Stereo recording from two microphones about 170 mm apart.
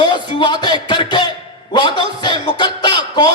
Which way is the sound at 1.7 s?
25° left (ahead or behind).